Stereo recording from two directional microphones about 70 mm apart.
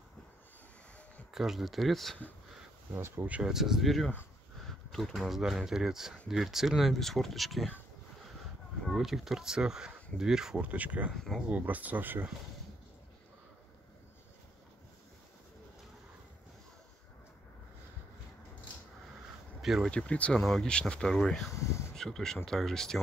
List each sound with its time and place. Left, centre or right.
1.3 s speech: centre
2.9 s speech: right
3.3 s speech: centre
3.5 s speech: centre
8.9 s speech: centre
10.6 s speech: right
11.1 s speech: centre
11.4 s speech: right
19.6 s speech: centre
19.9 s speech: centre
21.5 s a sound: left
21.9 s speech: centre